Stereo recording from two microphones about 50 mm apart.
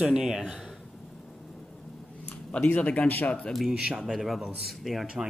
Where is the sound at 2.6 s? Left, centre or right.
Left.